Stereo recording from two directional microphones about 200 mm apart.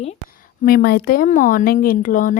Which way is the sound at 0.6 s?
50° left (ahead or behind).